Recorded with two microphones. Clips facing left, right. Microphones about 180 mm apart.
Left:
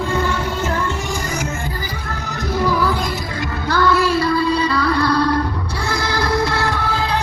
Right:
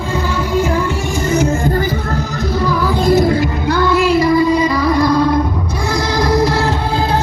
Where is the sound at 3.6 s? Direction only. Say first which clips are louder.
Right 2 dB; 15° right (ahead or behind).